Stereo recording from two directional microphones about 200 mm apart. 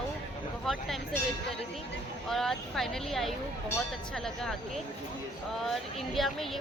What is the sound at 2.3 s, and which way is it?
Speech, centre (ahead or behind).